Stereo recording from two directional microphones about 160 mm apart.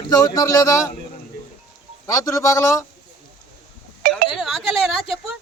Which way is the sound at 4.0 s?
70° right (ahead or behind).